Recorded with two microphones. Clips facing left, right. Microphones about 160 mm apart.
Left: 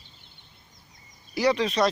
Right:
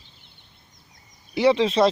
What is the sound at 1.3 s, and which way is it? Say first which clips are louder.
Speech: right 5 dB; 25° right (ahead or behind).